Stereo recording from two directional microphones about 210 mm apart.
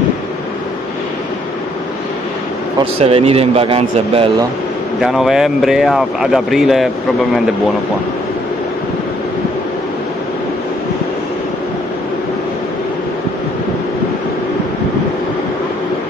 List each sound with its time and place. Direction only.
2.8 s speech: 25° right (ahead or behind)
5.0 s speech: centre (ahead or behind)